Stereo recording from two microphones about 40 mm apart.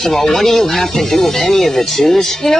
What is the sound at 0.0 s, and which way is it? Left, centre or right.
Speech, centre.